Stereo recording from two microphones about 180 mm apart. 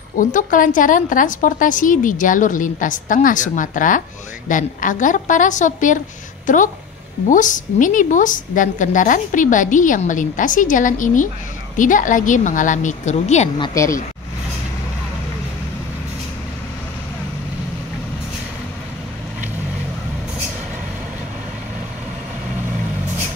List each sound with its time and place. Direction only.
0.2 s a woman's voice: 45° left (ahead or behind)
13.6 s speech: 15° left (ahead or behind)